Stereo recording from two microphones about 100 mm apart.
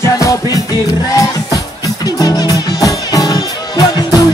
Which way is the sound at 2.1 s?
40° left (ahead or behind).